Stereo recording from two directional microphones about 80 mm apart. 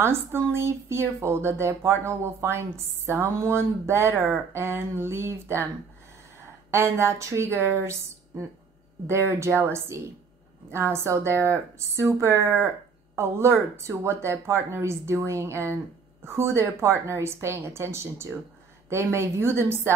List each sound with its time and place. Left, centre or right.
0.0 s speech: right
6.7 s speech: right